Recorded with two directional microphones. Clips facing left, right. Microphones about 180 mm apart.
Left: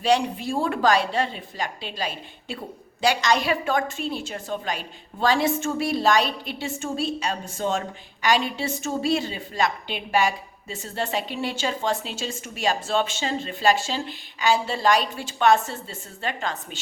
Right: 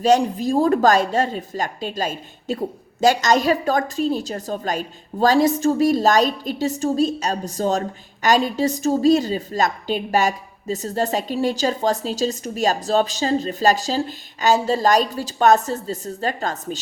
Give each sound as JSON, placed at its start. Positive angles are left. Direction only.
{"t": 0.0, "sound": "a woman's voice", "side_deg": -40}